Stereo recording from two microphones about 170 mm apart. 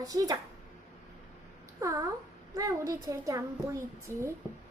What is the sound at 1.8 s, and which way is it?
A woman's voice, 20° right (ahead or behind).